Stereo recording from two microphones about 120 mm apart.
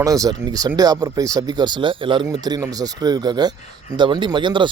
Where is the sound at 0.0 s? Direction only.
30° right (ahead or behind).